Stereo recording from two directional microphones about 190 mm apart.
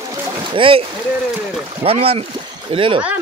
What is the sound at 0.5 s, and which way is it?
Speech, 25° right (ahead or behind).